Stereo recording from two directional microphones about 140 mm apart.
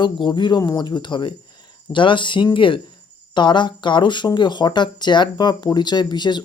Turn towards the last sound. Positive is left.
turn(degrees=30)  # may be behind; listen again after turning